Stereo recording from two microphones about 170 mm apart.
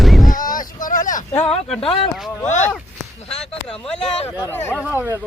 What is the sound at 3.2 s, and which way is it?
Speech, 40° left (ahead or behind).